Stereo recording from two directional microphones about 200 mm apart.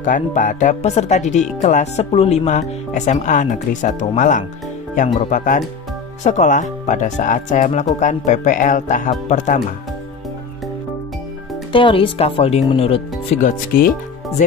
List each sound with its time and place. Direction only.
0.0 s speech: 40° left (ahead or behind)
11.7 s speech: 25° left (ahead or behind); by 13.9 s 45° left (ahead or behind)